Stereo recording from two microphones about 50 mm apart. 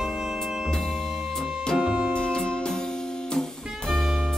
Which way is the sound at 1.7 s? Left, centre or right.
Centre.